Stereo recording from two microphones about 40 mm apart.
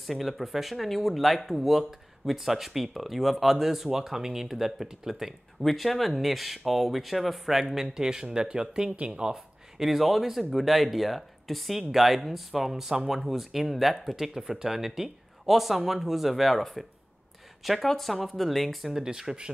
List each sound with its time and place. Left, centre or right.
0.0 s speech: centre
5.6 s speech: centre
17.8 s speech: centre
18.9 s speech: centre